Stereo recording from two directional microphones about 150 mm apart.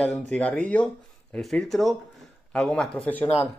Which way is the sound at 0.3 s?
10° left (ahead or behind).